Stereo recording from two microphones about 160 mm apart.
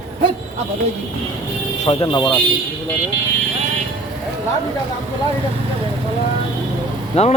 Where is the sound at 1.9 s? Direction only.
30° left (ahead or behind).